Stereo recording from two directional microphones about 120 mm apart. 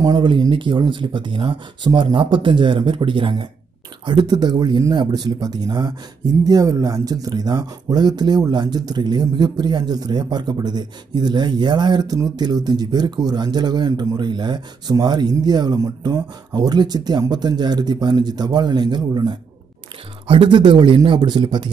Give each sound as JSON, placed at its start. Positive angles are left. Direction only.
{"t": 0.0, "sound": "speech", "side_deg": -35}